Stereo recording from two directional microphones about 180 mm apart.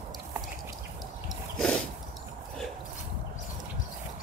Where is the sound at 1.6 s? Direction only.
5° left (ahead or behind).